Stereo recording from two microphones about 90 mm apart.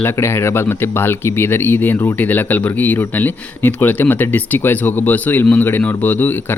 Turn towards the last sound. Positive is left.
turn(degrees=20)  # may be behind; listen again after turning